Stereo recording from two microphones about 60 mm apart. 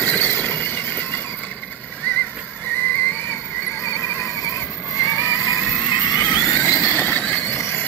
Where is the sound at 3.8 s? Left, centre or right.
Left.